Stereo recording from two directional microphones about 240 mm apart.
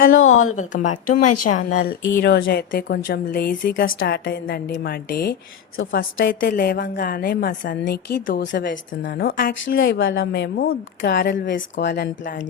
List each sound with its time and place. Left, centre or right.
0.1 s a woman's voice: left
0.5 s a woman's voice: left
1.2 s a woman's voice: left
1.5 s a woman's voice: left